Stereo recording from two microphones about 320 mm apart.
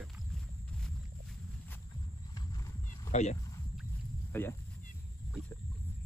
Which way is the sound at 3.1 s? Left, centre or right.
Left.